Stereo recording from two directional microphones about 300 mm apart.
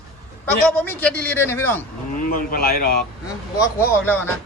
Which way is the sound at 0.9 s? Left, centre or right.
Centre.